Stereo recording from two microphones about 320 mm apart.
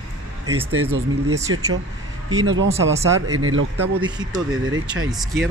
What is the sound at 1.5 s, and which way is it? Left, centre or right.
A man's voice, right.